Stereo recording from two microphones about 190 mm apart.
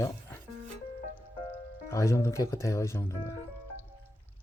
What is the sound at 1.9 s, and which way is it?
Speech, 15° left (ahead or behind).